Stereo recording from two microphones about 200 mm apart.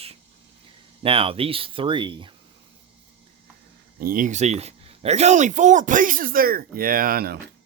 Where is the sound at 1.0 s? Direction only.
30° right (ahead or behind).